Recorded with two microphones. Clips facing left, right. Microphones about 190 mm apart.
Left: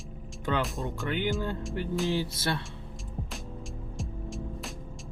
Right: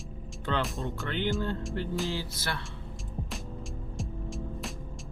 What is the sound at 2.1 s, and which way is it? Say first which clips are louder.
Speech: left 5 dB; 20° left (ahead or behind).